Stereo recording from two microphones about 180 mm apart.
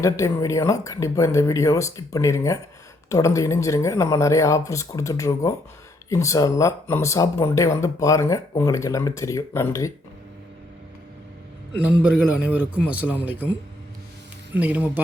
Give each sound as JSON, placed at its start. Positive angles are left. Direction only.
{"t": 0.0, "sound": "speech", "side_deg": 15}
{"t": 11.9, "sound": "a man's voice", "side_deg": -5}
{"t": 14.5, "sound": "a man's voice", "side_deg": -10}